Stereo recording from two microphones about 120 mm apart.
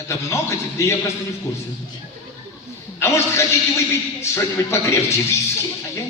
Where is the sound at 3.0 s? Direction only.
25° left (ahead or behind).